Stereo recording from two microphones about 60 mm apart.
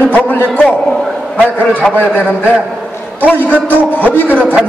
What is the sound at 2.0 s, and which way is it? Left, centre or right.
A man's voice, left.